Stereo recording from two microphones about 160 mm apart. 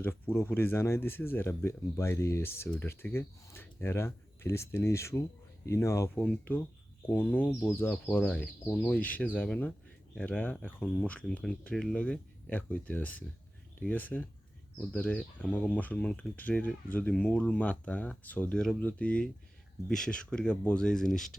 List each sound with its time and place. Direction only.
0.0 s speech: 15° left (ahead or behind)